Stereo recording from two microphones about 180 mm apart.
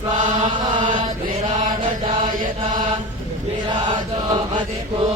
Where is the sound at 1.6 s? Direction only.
45° right (ahead or behind).